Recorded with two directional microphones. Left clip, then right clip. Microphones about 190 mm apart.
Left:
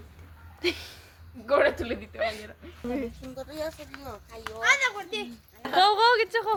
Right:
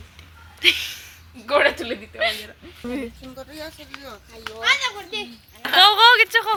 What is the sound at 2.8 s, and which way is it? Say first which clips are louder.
Speech: right 2 dB; 45° right (ahead or behind).